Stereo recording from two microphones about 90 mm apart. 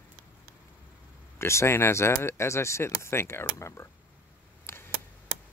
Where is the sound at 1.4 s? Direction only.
30° left (ahead or behind).